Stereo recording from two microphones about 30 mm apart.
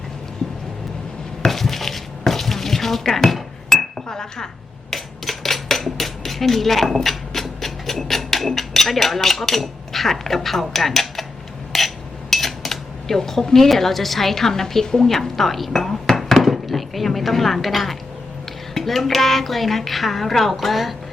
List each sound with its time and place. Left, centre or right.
1.5 s dishes: centre
3.7 s chink: centre
4.1 s speech: centre
4.9 s a sound: centre
5.6 s cutlery: centre
11.7 s hammer: centre
12.3 s a woman's voice: centre
16.1 s chopping: centre
18.7 s a woman's voice: centre